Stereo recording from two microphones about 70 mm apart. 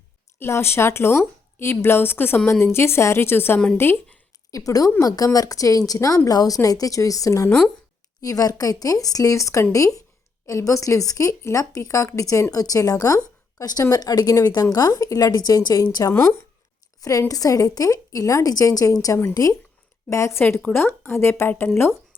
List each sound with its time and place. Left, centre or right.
0.3 s speech: left
4.5 s a woman's voice: left
16.0 s speech: left
17.0 s a woman's voice: left
20.7 s speech: left